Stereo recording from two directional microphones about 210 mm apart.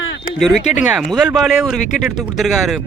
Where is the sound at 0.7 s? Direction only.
5° right (ahead or behind).